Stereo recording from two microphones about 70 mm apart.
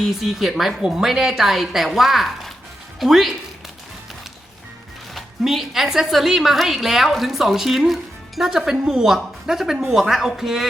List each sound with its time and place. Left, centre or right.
0.0 s a woman's voice: centre
5.1 s a woman's voice: centre